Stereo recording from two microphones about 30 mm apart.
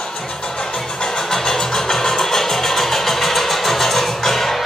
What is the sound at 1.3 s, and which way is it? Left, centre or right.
Music, centre.